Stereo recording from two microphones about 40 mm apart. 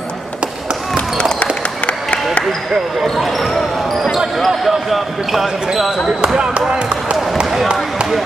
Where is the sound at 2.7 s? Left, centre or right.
Centre.